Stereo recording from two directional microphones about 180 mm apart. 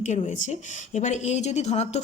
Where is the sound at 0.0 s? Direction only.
40° left (ahead or behind).